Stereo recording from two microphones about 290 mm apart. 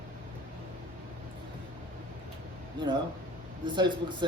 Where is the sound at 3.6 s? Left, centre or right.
Centre.